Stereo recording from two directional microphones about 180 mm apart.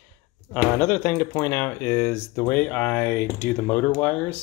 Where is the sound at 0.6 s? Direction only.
15° left (ahead or behind).